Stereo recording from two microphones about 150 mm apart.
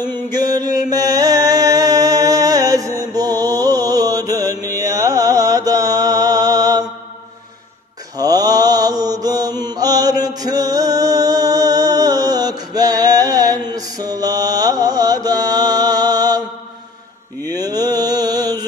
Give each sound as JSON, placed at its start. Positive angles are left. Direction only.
{"t": 0.0, "sound": "mantra", "side_deg": 15}
{"t": 0.3, "sound": "mantra", "side_deg": -25}
{"t": 8.2, "sound": "mantra", "side_deg": -25}
{"t": 17.5, "sound": "mantra", "side_deg": -25}